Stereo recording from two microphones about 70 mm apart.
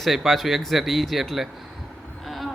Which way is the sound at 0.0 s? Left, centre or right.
Centre.